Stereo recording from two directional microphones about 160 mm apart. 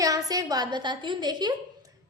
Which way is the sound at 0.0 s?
20° right (ahead or behind).